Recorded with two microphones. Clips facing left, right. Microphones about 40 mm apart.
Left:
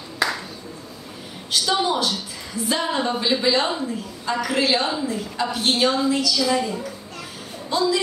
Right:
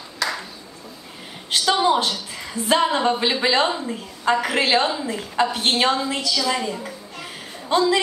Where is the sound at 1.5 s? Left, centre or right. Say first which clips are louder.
Right 3 dB; right.